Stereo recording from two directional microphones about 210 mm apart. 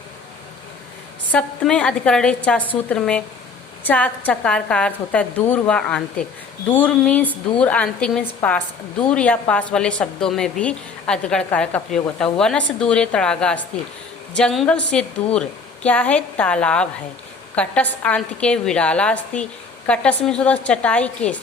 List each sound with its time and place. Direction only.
1.3 s a woman's voice: 5° left (ahead or behind)